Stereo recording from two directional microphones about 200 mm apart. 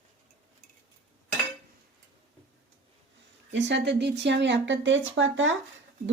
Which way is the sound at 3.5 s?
65° right (ahead or behind).